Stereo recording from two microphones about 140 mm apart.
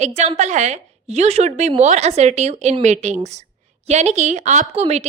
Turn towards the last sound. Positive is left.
turn(degrees=-50)  # may be behind; listen again after turning